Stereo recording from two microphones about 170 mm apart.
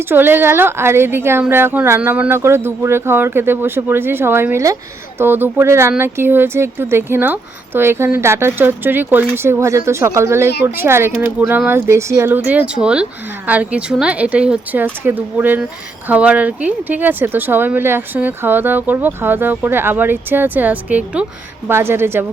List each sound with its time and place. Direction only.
0.1 s speech: 10° right (ahead or behind)
10.5 s a woman's voice: 70° left (ahead or behind)
10.8 s speech: 15° right (ahead or behind)